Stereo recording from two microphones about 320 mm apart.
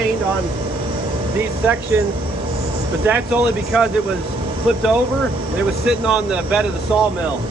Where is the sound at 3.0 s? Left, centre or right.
Centre.